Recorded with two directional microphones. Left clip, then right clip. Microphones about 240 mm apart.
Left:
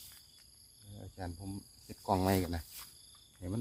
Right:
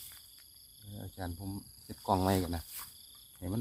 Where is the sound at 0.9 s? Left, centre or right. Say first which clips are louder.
Right 2 dB; centre.